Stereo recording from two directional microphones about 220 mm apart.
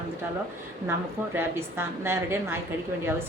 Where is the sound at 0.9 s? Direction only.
10° right (ahead or behind).